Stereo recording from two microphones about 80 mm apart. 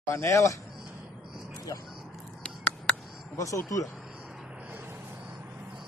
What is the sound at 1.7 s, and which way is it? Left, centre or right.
Speech, left.